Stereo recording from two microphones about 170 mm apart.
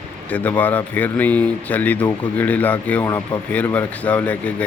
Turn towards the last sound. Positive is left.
turn(degrees=10)  # may be behind; listen again after turning